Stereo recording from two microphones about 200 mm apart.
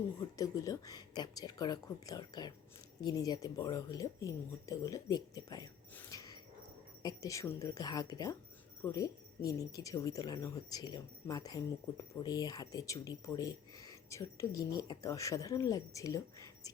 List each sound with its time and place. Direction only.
0.3 s speech: 15° left (ahead or behind)